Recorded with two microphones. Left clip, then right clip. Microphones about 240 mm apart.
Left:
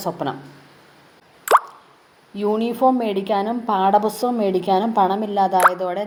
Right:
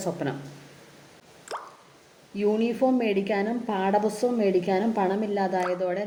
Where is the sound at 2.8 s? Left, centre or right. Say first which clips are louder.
Left 8 dB; left.